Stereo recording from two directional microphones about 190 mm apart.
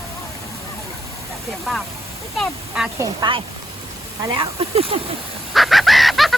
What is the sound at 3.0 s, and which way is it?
Speech, 25° right (ahead or behind).